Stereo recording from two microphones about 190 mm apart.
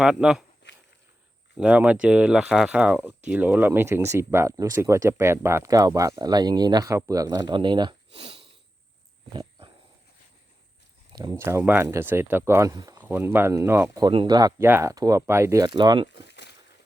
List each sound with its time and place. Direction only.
0.0 s speech: 5° right (ahead or behind)
1.5 s speech: 5° right (ahead or behind); by 8.5 s 30° right (ahead or behind)
9.3 s wild animals: 25° right (ahead or behind)
11.1 s speech: 20° right (ahead or behind)
16.1 s a sound: 65° left (ahead or behind)